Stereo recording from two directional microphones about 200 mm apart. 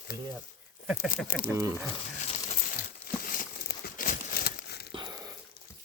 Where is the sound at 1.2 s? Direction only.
45° left (ahead or behind).